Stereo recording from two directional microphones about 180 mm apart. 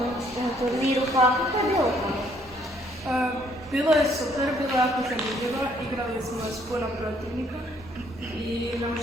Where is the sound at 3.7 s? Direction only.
Centre (ahead or behind).